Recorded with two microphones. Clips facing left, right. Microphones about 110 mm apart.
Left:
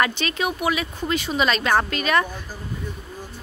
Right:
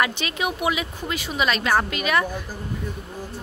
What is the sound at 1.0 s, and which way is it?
Speech, 10° right (ahead or behind).